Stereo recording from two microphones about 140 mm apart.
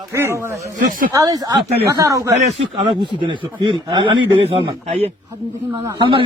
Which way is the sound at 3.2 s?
35° right (ahead or behind).